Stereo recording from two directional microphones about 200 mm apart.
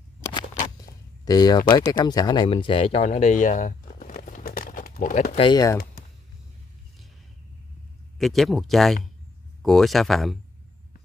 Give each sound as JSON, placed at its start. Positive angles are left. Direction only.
{"t": 0.7, "sound": "a sound", "side_deg": 20}
{"t": 1.9, "sound": "speech", "side_deg": 20}
{"t": 5.5, "sound": "speech", "side_deg": 15}
{"t": 8.2, "sound": "speech", "side_deg": 0}